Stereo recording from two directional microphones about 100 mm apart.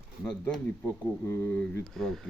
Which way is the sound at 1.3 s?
25° left (ahead or behind).